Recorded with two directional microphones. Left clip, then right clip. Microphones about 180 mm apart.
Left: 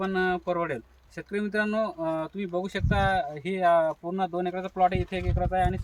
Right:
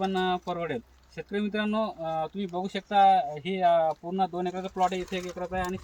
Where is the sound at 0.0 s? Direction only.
15° left (ahead or behind).